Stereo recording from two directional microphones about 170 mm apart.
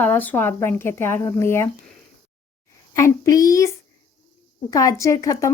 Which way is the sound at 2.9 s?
20° left (ahead or behind).